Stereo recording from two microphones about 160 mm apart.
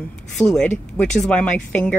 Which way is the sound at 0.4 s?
5° left (ahead or behind).